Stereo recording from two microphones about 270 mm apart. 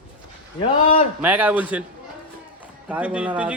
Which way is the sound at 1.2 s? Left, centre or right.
Centre.